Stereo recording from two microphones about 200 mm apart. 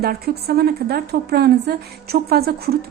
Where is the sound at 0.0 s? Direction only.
50° right (ahead or behind).